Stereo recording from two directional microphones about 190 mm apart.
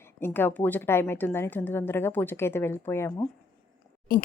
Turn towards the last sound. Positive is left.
turn(degrees=50)  # may be behind; listen again after turning